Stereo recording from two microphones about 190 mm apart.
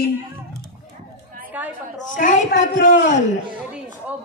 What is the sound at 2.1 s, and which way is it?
Speech, 40° left (ahead or behind).